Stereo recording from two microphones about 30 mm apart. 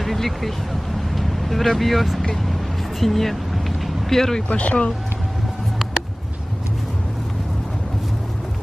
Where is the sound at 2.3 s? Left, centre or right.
Centre.